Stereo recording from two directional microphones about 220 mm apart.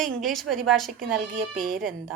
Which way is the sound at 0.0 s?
Centre (ahead or behind).